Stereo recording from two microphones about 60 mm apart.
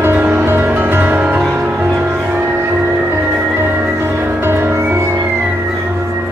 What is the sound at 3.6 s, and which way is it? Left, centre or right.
Music, right.